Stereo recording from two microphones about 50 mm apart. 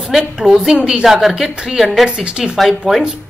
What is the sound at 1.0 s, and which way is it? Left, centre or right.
A woman's voice, centre.